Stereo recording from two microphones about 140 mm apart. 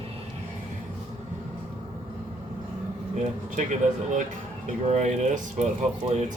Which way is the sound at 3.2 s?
60° right (ahead or behind).